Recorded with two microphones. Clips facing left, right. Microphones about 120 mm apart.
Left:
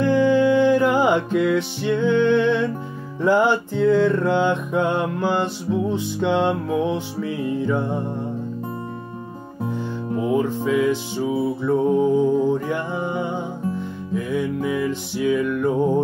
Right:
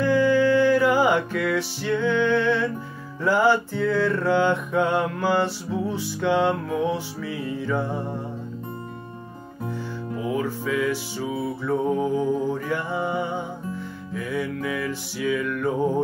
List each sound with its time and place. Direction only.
0.0 s music: 20° left (ahead or behind)
10.1 s music: 20° left (ahead or behind)